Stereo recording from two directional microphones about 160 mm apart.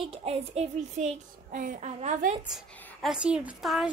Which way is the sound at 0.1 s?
40° right (ahead or behind).